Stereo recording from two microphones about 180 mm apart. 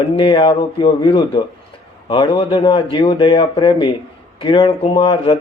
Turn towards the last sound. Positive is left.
turn(degrees=25)  # may be behind; listen again after turning